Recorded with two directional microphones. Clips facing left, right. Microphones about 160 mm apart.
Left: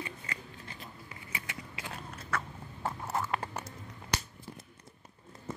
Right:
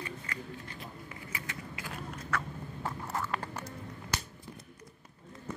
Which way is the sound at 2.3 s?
25° left (ahead or behind).